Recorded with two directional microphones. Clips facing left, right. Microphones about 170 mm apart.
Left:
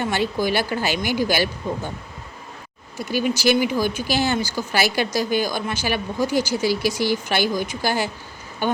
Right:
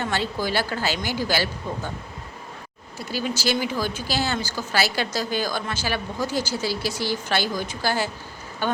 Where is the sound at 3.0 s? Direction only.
15° left (ahead or behind).